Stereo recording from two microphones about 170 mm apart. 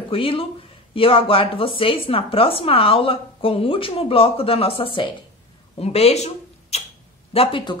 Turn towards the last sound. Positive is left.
turn(degrees=30)  # may be behind; listen again after turning